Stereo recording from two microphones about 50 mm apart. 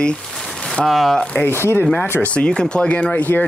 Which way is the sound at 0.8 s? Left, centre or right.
Centre.